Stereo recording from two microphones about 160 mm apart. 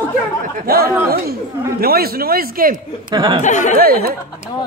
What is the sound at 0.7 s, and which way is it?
A man's voice, 70° right (ahead or behind).